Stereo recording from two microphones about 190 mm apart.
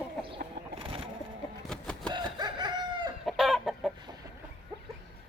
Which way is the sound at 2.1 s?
20° right (ahead or behind).